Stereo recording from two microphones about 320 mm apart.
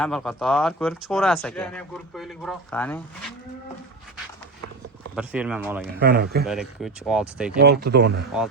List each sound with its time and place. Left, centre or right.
0.0 s speech: centre
5.1 s speech: centre
6.0 s speech: right
6.4 s speech: centre
7.6 s speech: right